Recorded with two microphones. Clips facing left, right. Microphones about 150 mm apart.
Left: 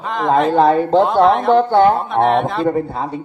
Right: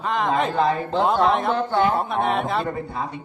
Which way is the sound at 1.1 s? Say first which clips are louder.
Left 6 dB; centre (ahead or behind).